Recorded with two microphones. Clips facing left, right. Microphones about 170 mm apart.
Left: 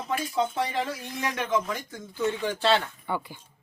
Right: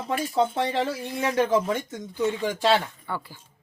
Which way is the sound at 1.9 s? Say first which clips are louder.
Right 2 dB; 15° right (ahead or behind).